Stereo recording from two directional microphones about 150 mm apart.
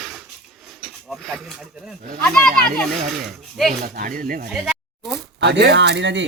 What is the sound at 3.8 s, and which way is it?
Speech, 70° right (ahead or behind).